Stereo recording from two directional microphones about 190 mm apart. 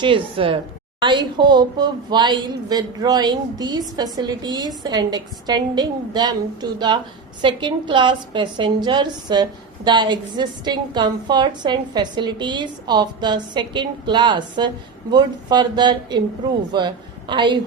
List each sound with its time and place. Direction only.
0.0 s a woman's voice: 25° right (ahead or behind)